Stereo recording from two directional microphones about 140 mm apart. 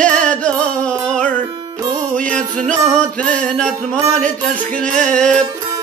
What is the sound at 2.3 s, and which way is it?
Music, 60° right (ahead or behind).